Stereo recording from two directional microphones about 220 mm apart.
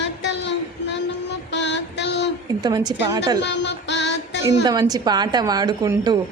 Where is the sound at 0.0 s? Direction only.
55° left (ahead or behind).